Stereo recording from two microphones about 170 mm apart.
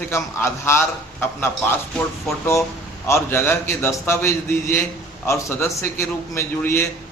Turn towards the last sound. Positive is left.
turn(degrees=15)  # may be behind; listen again after turning